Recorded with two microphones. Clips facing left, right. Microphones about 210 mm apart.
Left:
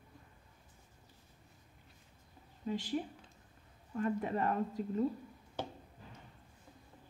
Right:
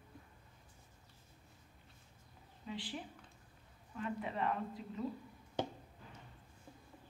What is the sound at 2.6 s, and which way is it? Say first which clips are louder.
A woman's voice: left 8 dB; 45° left (ahead or behind).